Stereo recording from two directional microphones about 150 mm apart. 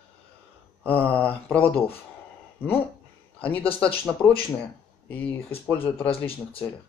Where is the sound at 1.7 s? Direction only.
40° left (ahead or behind).